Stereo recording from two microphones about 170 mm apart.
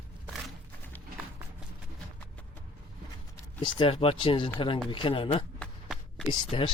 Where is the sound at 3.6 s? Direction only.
30° left (ahead or behind).